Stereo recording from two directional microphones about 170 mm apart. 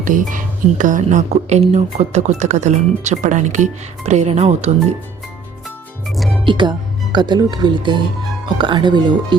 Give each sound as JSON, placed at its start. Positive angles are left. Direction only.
{"t": 0.0, "sound": "speech", "side_deg": -50}
{"t": 6.1, "sound": "music", "side_deg": 0}
{"t": 6.4, "sound": "speech", "side_deg": -30}